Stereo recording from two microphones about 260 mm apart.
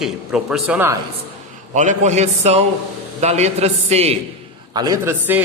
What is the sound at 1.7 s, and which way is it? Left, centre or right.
A man's voice, right.